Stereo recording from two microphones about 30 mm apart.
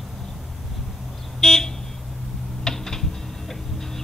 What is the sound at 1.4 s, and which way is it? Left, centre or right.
Vehicle, centre.